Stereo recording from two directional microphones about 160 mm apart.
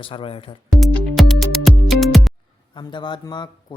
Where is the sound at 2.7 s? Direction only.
30° left (ahead or behind).